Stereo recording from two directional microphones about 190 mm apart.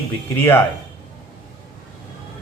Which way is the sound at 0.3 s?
10° left (ahead or behind).